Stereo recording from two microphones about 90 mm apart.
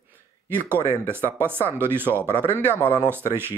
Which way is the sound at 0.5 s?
25° right (ahead or behind).